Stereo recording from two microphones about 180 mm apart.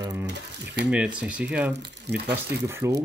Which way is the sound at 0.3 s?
70° right (ahead or behind).